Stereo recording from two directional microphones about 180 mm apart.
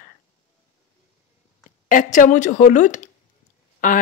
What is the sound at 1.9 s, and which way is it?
A woman's voice, 45° left (ahead or behind).